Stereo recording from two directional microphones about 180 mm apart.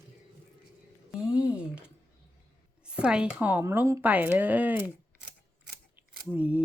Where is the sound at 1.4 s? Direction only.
5° right (ahead or behind).